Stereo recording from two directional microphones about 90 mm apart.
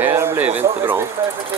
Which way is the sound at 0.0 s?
25° right (ahead or behind).